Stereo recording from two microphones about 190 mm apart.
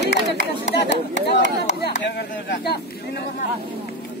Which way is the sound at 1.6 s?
60° left (ahead or behind).